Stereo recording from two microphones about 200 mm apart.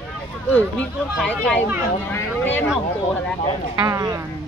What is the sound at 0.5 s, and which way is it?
Speech, 5° left (ahead or behind).